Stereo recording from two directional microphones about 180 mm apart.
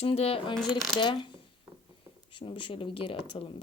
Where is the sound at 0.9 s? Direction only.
25° left (ahead or behind).